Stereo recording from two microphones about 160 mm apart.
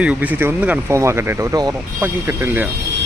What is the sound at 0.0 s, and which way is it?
Speech, 10° right (ahead or behind).